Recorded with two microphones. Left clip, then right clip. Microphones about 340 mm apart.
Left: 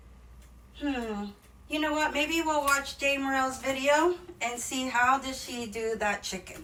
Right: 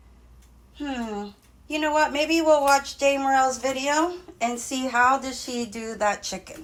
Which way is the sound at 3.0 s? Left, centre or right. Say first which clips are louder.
Right 7 dB; centre.